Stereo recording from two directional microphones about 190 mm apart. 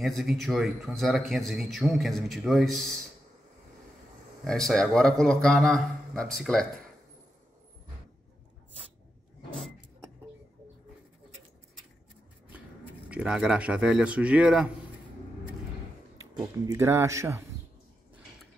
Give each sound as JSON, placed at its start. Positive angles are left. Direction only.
{"t": 0.0, "sound": "a man's voice", "side_deg": 0}
{"t": 4.5, "sound": "a man's voice", "side_deg": 0}
{"t": 13.1, "sound": "a man's voice", "side_deg": -5}
{"t": 16.5, "sound": "speech", "side_deg": -15}